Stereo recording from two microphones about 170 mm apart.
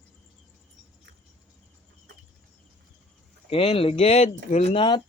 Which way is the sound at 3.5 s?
35° left (ahead or behind).